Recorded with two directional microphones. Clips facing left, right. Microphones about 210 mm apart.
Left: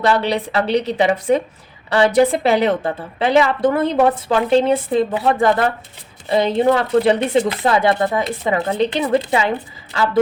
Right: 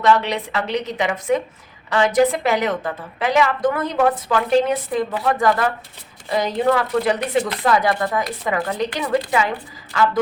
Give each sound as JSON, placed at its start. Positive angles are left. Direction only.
{"t": 0.0, "sound": "a woman's voice", "side_deg": 35}